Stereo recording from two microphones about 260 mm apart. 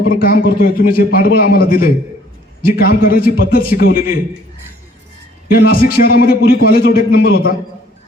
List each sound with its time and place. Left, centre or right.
0.1 s a man's voice: left
5.5 s a man's voice: left